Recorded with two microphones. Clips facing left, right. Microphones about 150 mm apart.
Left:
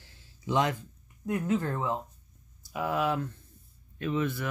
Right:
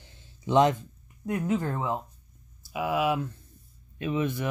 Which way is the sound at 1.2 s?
15° right (ahead or behind).